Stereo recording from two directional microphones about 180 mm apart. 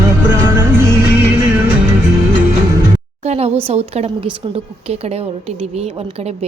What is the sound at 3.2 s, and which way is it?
Speech, 35° right (ahead or behind).